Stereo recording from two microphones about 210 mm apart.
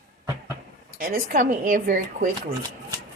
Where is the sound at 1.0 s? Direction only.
45° right (ahead or behind).